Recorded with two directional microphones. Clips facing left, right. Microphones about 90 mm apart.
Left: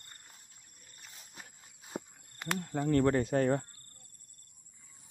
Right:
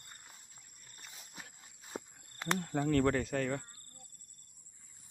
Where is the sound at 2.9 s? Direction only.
15° left (ahead or behind).